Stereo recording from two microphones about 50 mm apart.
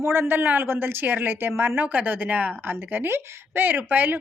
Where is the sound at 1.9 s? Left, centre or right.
Right.